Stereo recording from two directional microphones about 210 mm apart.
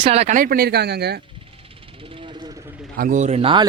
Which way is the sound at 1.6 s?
25° right (ahead or behind).